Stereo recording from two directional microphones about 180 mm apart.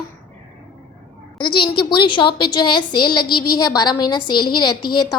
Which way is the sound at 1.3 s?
30° left (ahead or behind).